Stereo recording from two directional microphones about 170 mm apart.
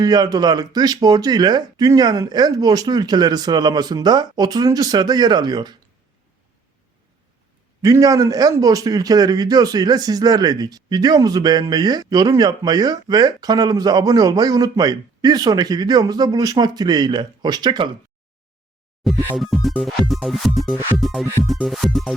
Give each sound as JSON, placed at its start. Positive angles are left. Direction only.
{"t": 0.0, "sound": "a man's voice", "side_deg": -25}
{"t": 7.8, "sound": "a man's voice", "side_deg": -20}
{"t": 19.0, "sound": "music", "side_deg": 0}